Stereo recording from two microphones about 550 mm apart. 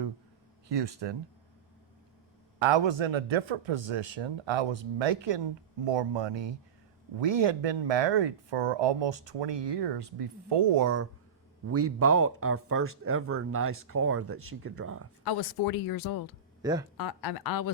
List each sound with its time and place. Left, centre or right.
0.7 s speech: right
2.6 s speech: right
11.7 s speech: right
15.2 s speech: left
16.6 s speech: centre
17.0 s speech: left